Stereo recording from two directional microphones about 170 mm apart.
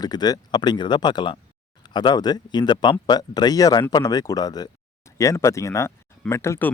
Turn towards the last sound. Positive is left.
turn(degrees=15)  # may be behind; listen again after turning